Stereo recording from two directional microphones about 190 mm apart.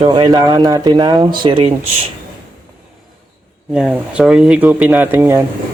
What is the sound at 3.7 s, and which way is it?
Speech, 5° right (ahead or behind).